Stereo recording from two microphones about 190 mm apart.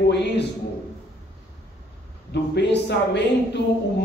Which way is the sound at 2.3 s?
65° left (ahead or behind).